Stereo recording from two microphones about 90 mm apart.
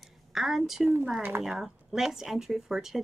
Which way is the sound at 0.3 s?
Centre (ahead or behind).